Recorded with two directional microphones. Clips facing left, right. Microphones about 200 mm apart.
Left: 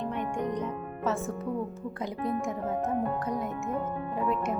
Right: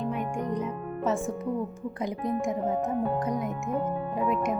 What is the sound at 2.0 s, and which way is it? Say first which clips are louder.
Speech: right 2 dB; 15° right (ahead or behind).